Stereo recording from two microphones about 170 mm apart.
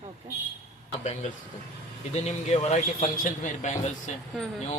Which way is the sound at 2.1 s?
40° left (ahead or behind).